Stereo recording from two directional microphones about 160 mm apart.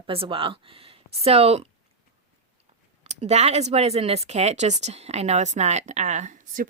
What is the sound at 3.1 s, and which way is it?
Speech, 45° right (ahead or behind).